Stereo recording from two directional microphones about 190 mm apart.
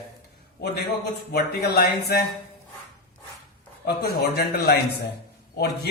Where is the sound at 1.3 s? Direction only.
55° left (ahead or behind).